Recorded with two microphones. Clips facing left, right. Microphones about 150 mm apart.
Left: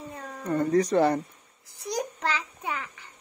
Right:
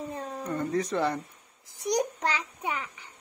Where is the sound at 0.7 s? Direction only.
40° left (ahead or behind).